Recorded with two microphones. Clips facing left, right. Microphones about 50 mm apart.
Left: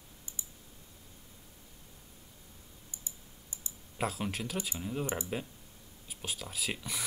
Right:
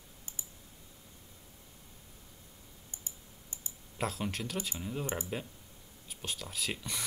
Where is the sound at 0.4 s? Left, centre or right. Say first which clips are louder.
Left 1 dB; right.